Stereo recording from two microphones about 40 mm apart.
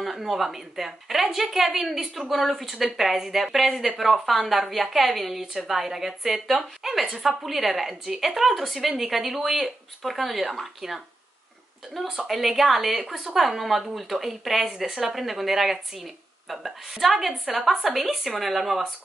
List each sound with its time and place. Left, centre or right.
0.0 s a woman's voice: centre
12.2 s a woman's voice: centre